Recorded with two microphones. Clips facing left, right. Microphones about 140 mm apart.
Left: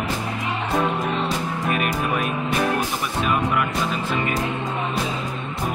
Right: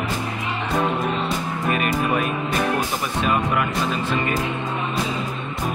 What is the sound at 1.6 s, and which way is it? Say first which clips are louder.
Speech: right 3 dB; centre (ahead or behind).